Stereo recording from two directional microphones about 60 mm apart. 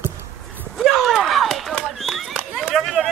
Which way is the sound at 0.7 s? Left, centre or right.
Centre.